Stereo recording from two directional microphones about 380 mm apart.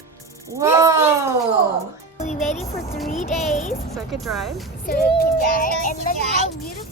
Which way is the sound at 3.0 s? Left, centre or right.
Centre.